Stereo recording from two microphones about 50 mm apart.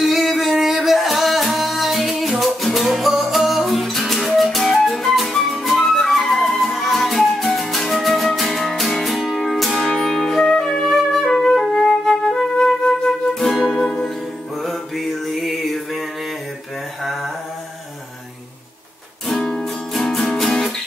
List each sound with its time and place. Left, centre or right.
0.0 s music: centre
13.8 s music: centre
14.6 s mantra: centre
19.5 s music: centre